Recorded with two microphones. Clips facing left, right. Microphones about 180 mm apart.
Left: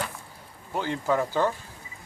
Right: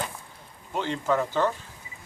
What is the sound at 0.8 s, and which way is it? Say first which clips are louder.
Speech: even; 10° left (ahead or behind).